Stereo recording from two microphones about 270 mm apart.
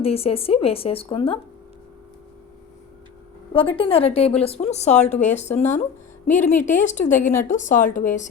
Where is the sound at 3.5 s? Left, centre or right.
Centre.